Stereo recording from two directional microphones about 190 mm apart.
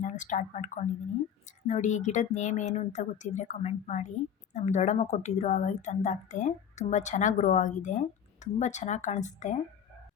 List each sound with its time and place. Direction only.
0.0 s a woman's voice: 40° left (ahead or behind)